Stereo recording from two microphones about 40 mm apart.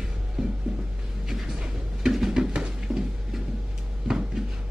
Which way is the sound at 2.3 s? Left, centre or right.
Centre.